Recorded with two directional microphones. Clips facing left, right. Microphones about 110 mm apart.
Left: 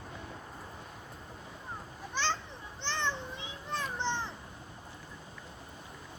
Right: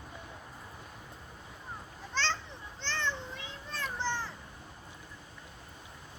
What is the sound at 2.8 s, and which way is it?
Children playing, 15° left (ahead or behind).